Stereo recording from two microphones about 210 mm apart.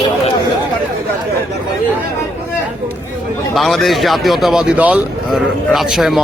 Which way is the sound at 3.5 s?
Centre (ahead or behind).